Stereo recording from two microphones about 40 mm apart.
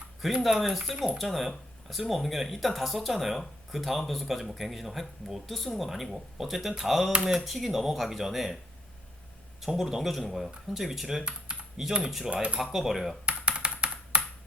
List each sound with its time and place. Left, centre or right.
0.2 s speech: centre
0.9 s speech: centre
1.2 s speech: centre
9.6 s speech: centre
12.3 s speech: right
12.7 s speech: centre
13.2 s a sound: right